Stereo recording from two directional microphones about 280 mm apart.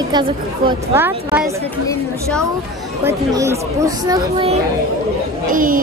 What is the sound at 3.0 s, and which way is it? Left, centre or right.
Speech, centre.